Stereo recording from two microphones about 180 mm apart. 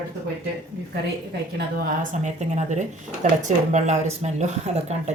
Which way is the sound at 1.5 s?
50° right (ahead or behind).